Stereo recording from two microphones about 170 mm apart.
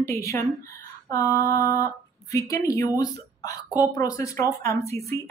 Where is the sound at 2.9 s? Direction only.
20° left (ahead or behind).